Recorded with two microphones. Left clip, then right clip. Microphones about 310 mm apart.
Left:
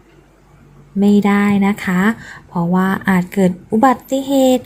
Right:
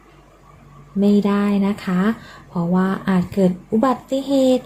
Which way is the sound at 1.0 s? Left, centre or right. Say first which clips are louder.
Left 4 dB; centre.